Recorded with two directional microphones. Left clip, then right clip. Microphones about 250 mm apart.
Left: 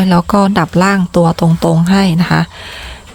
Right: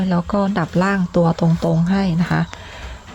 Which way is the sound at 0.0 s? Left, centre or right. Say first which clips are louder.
Left 9 dB; left.